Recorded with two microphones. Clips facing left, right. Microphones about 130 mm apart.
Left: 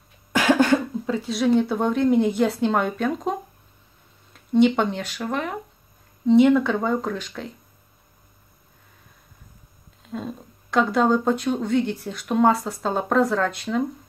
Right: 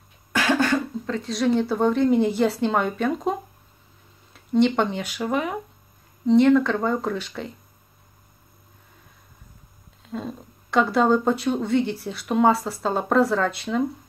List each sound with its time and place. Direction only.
0.3 s cough: 20° left (ahead or behind)
1.0 s speech: 5° left (ahead or behind)
10.0 s speech: centre (ahead or behind)